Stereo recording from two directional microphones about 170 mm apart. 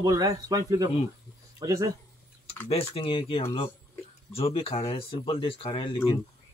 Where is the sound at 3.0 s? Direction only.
30° left (ahead or behind).